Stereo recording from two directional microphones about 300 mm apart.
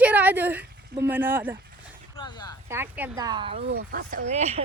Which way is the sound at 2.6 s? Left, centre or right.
Centre.